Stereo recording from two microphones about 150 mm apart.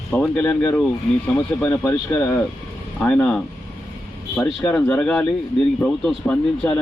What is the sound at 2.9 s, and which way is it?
Speech, 5° left (ahead or behind).